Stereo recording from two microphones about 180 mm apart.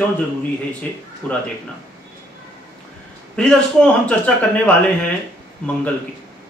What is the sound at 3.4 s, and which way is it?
A man's voice, 5° left (ahead or behind).